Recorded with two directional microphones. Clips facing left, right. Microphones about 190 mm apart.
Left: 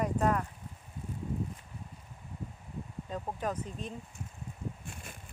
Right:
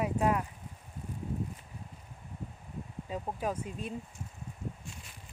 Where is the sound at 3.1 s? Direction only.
10° right (ahead or behind).